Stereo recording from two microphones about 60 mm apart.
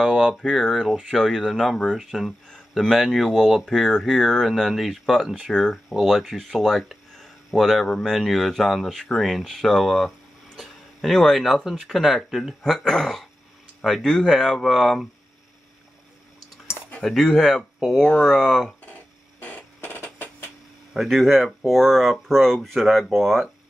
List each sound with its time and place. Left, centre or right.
0.4 s speech: centre
5.3 s speech: centre
5.9 s speech: centre
17.0 s speech: centre
19.4 s a sound: left
20.9 s speech: centre